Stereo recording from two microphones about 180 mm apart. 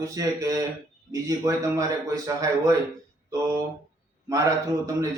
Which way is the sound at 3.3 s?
20° right (ahead or behind).